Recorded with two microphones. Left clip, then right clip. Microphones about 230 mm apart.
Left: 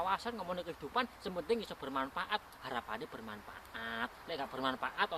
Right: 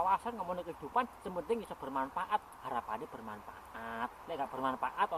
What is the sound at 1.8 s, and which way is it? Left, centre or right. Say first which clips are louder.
Speech: right 4 dB; left.